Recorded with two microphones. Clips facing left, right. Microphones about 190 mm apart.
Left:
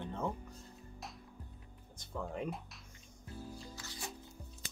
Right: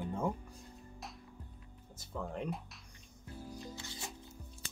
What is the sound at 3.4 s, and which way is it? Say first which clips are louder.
Music: right 5 dB; 20° right (ahead or behind).